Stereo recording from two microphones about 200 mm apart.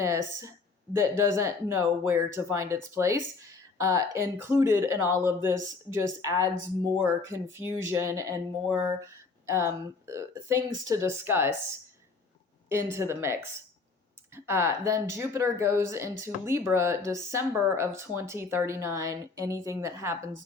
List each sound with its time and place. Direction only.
0.0 s speech: 15° right (ahead or behind)
8.6 s a sound: 5° right (ahead or behind)
9.5 s speech: 15° right (ahead or behind)
12.6 s speech: 15° right (ahead or behind)